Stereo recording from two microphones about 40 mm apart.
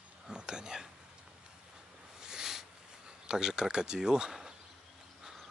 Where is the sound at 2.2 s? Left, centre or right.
Centre.